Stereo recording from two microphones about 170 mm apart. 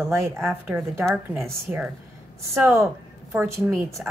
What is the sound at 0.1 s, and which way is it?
A woman's voice, 10° right (ahead or behind).